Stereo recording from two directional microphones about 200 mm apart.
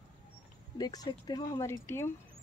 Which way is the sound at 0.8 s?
20° left (ahead or behind).